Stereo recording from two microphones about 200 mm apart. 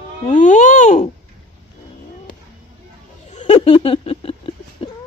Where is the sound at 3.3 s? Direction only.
30° left (ahead or behind).